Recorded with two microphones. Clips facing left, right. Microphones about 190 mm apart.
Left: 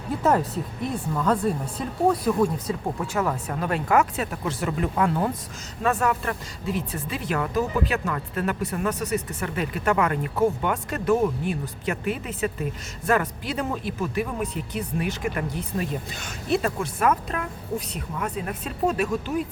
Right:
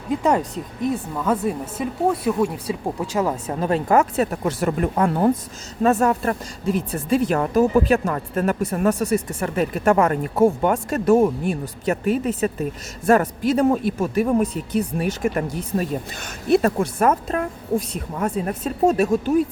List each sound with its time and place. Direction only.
1.1 s speech: 5° right (ahead or behind)
3.2 s speech: 20° right (ahead or behind)
4.2 s speech: 45° right (ahead or behind)